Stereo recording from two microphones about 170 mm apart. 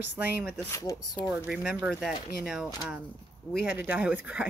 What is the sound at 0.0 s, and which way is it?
Speech, 10° right (ahead or behind).